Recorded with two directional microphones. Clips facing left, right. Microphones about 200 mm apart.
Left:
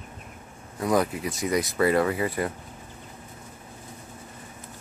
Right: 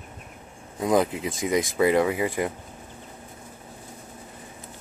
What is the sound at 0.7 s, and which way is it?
Speech, 20° right (ahead or behind).